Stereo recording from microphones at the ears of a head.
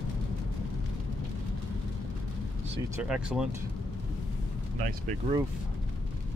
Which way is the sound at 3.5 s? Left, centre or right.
Left.